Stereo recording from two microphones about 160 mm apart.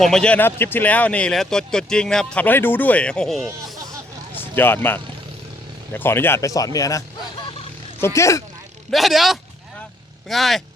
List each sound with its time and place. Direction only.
0.0 s speech: 5° left (ahead or behind)
4.4 s speech: 15° left (ahead or behind)
8.0 s speech: 20° left (ahead or behind)
8.9 s speech: centre (ahead or behind)